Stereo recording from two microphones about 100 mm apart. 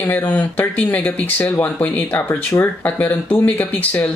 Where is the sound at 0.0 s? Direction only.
15° left (ahead or behind).